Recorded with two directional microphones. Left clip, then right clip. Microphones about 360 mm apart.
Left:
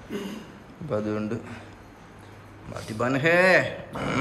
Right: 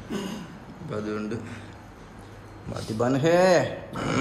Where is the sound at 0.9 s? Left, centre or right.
Centre.